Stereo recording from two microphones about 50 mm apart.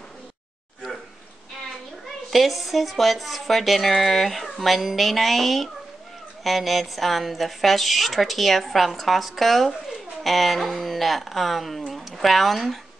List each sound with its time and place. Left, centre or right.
2.3 s speech: centre